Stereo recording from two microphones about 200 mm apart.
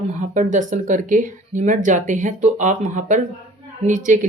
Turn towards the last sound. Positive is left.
turn(degrees=-40)  # may be behind; listen again after turning